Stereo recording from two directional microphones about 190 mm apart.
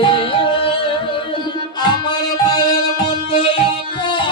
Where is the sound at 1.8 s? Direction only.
20° left (ahead or behind).